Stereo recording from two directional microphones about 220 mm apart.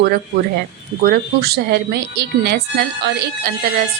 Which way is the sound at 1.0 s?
45° right (ahead or behind).